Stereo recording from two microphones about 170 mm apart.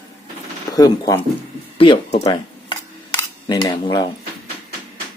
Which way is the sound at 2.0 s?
40° left (ahead or behind).